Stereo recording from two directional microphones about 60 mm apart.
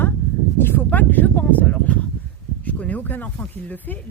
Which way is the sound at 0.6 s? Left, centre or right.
Left.